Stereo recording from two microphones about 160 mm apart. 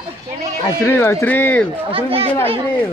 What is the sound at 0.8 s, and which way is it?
Speech, 15° left (ahead or behind).